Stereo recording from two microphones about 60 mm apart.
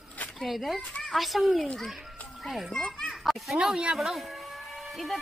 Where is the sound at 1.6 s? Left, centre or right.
Centre.